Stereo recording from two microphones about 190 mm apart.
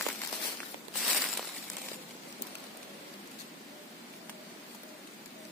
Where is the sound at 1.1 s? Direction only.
5° right (ahead or behind).